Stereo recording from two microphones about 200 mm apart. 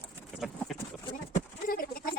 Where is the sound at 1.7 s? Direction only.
45° left (ahead or behind).